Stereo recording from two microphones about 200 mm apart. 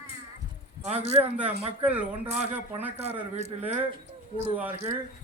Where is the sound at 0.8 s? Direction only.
30° right (ahead or behind).